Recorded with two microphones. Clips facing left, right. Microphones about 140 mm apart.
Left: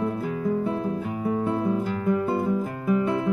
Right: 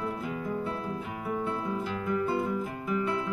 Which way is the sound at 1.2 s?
45° left (ahead or behind).